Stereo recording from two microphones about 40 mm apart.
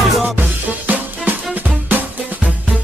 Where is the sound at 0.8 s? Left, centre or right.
Right.